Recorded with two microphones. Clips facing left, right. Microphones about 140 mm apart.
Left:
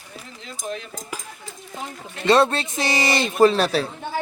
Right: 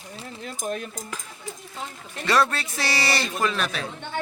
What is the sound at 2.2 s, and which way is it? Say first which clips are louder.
A man's voice: left 5 dB; 25° left (ahead or behind).